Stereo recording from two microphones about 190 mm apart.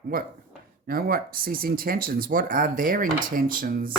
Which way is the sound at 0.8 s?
50° right (ahead or behind).